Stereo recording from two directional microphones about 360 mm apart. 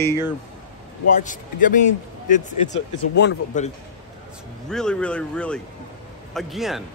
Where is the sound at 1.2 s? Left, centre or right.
Left.